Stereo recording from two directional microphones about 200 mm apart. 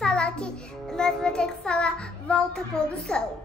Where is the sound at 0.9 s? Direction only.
5° left (ahead or behind).